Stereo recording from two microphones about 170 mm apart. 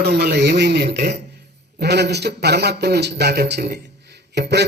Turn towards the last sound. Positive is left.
turn(degrees=-90)